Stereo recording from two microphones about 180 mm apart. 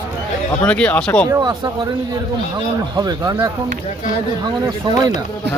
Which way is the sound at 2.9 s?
20° right (ahead or behind).